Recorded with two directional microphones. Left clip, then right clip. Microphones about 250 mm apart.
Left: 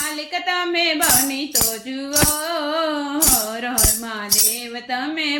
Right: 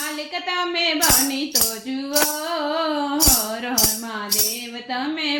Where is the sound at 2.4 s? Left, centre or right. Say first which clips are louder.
Left 1 dB; centre.